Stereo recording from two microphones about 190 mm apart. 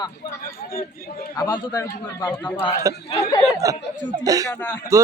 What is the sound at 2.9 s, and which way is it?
Speech, 15° right (ahead or behind).